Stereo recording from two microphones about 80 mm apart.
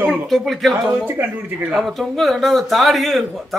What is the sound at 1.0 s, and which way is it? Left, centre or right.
Speech, right.